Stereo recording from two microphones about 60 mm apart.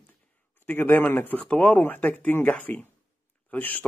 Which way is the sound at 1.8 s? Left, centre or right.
Left.